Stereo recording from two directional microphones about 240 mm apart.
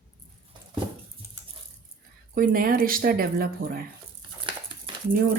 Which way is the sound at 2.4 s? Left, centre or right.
Right.